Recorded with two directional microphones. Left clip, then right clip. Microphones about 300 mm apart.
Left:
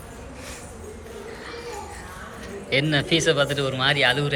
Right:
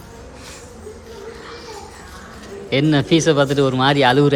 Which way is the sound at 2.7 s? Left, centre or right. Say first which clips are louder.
Right 5 dB; centre.